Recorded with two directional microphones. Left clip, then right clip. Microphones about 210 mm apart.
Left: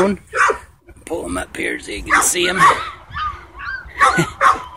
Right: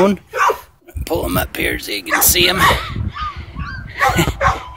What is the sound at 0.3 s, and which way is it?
Dog, 40° left (ahead or behind).